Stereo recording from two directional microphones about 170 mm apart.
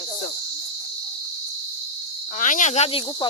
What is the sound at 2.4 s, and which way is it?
Speech, 50° left (ahead or behind).